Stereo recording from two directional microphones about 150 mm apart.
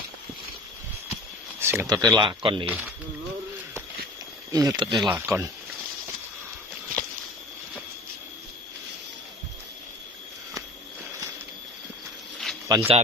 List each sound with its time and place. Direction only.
1.6 s speech: 15° right (ahead or behind); by 2.6 s 35° right (ahead or behind)
2.6 s speech: 10° right (ahead or behind)
4.5 s speech: 25° right (ahead or behind)
5.0 s speech: 10° right (ahead or behind)
12.6 s speech: 25° right (ahead or behind)